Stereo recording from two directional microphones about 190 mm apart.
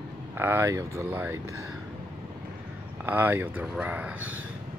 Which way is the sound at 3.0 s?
10° right (ahead or behind).